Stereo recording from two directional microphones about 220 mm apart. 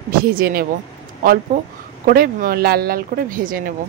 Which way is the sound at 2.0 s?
40° right (ahead or behind).